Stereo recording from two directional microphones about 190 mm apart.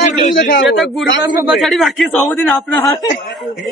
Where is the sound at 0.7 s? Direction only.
Centre (ahead or behind).